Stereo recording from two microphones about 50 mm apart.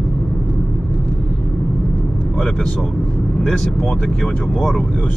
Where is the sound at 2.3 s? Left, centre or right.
Centre.